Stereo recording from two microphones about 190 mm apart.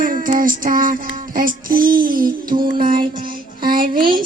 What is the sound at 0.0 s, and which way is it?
Music, 45° right (ahead or behind).